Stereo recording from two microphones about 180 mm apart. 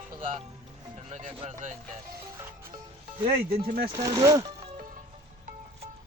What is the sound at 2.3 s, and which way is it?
Music, 15° right (ahead or behind).